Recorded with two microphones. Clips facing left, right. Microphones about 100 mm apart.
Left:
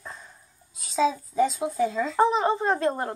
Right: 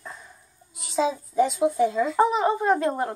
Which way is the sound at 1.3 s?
5° right (ahead or behind).